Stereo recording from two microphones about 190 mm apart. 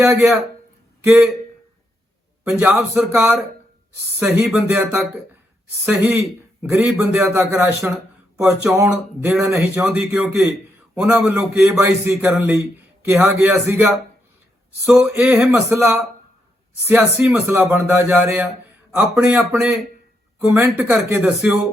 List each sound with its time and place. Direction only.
0.0 s a man's voice: 10° right (ahead or behind)
2.5 s a man's voice: 5° right (ahead or behind)